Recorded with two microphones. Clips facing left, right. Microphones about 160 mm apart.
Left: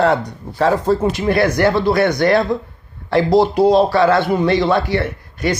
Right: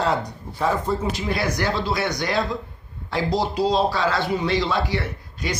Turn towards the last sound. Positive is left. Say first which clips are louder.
# left 8 dB
turn(degrees=60)  # may be behind; listen again after turning